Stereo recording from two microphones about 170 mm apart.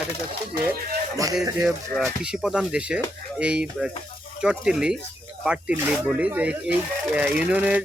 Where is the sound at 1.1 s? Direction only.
20° right (ahead or behind).